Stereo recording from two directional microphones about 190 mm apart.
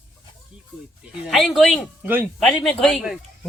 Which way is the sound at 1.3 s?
Centre (ahead or behind).